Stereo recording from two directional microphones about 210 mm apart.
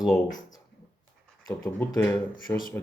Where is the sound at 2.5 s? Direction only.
15° left (ahead or behind).